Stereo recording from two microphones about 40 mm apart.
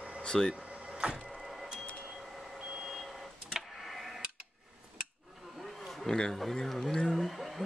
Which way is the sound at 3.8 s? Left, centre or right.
Centre.